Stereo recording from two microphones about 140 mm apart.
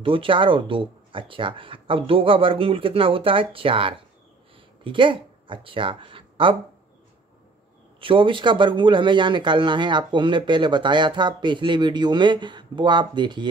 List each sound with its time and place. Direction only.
0.0 s speech: 40° right (ahead or behind)
8.0 s speech: 40° right (ahead or behind)